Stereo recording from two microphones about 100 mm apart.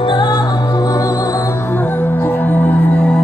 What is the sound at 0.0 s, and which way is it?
Music, 50° left (ahead or behind).